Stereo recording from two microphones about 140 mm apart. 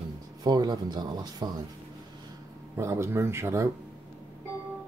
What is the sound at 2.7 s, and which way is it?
Speech, 20° right (ahead or behind).